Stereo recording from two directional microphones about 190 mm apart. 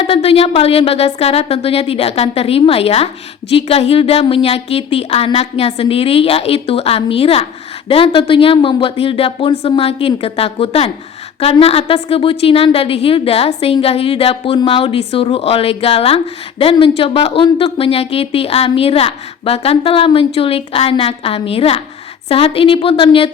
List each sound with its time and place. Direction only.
0.0 s a woman's voice: 30° left (ahead or behind)